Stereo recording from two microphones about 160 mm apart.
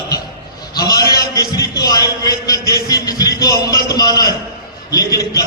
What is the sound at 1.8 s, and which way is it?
Music, 25° left (ahead or behind).